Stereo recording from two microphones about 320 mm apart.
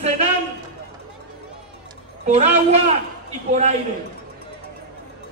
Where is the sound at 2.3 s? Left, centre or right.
Right.